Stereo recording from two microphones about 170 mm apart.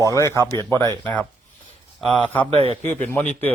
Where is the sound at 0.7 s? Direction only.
20° right (ahead or behind).